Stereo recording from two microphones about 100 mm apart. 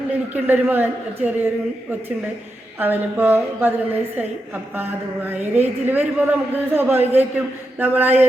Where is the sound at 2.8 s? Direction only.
20° right (ahead or behind).